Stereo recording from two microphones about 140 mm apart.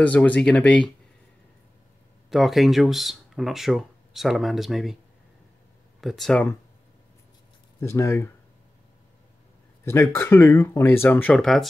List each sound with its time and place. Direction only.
0.0 s speech: 10° left (ahead or behind)
2.2 s speech: centre (ahead or behind)
5.9 s speech: centre (ahead or behind)
7.8 s speech: 20° left (ahead or behind)
9.8 s speech: 15° left (ahead or behind)